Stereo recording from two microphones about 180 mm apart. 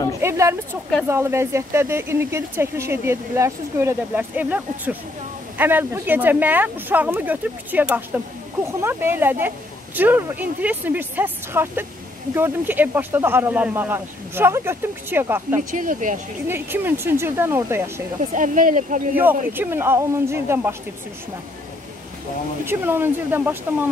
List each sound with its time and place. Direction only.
0.2 s speech: 15° right (ahead or behind)
15.7 s speech: 45° right (ahead or behind)
16.4 s speech: 10° right (ahead or behind)
18.3 s speech: 45° right (ahead or behind)
19.1 s speech: 10° right (ahead or behind)
22.7 s speech: 10° right (ahead or behind)